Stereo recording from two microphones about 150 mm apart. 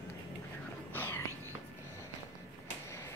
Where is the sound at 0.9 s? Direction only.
15° left (ahead or behind).